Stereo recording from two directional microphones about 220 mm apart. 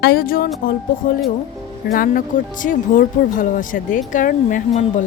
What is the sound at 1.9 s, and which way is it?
Speech, 40° left (ahead or behind).